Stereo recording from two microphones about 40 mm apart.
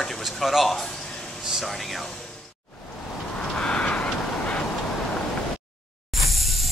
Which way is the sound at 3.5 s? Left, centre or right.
Left.